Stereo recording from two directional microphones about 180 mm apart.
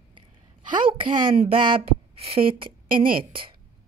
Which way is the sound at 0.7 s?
30° right (ahead or behind).